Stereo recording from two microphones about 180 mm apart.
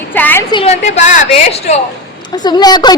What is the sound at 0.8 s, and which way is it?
Speech, 40° left (ahead or behind).